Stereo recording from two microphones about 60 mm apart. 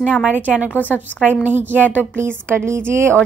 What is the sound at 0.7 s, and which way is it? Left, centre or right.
Speech, left.